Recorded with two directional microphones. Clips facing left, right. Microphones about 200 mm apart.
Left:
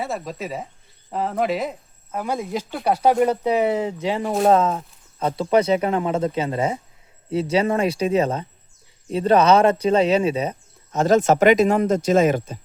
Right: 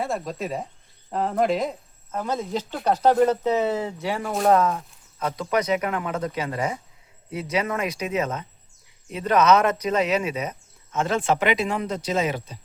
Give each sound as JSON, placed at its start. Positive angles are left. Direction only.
{"t": 0.0, "sound": "speech", "side_deg": 0}